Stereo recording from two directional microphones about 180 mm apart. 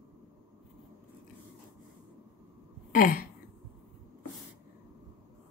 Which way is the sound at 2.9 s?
50° left (ahead or behind).